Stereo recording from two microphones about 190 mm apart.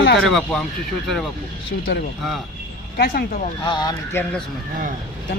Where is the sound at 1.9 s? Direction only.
65° left (ahead or behind).